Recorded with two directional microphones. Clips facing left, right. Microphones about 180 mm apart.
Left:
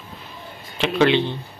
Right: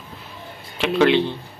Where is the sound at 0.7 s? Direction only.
5° right (ahead or behind).